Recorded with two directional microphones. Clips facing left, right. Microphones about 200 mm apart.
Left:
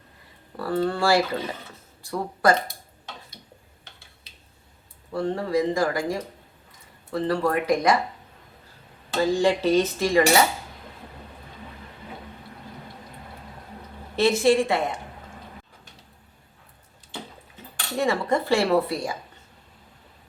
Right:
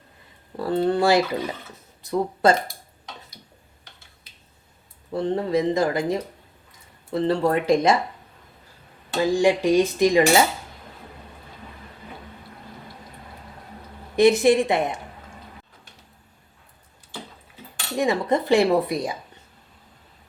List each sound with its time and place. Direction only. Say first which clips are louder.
0.5 s speech: right 3 dB; 25° right (ahead or behind)
5.1 s speech: right 2 dB; 20° right (ahead or behind)
9.1 s cutlery: right 2 dB; 15° right (ahead or behind)
14.2 s speech: right 3 dB; 15° right (ahead or behind)
17.9 s cutlery: right 2 dB; 15° right (ahead or behind)